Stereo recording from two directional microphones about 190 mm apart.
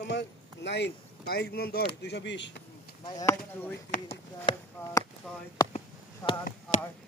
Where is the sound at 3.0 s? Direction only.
20° left (ahead or behind).